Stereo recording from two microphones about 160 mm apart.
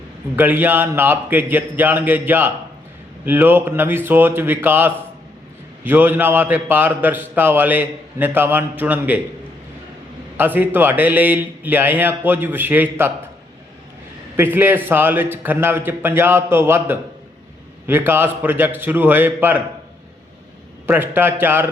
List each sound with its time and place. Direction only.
0.3 s a man's voice: 10° right (ahead or behind)
10.3 s a man's voice: 10° right (ahead or behind)
14.3 s a man's voice: 15° right (ahead or behind)
20.8 s a man's voice: 15° right (ahead or behind)